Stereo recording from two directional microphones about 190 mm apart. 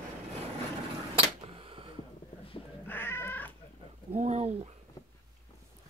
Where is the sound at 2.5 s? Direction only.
25° left (ahead or behind).